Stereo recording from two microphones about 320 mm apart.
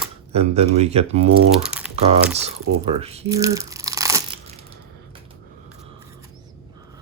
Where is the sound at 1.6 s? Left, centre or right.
Centre.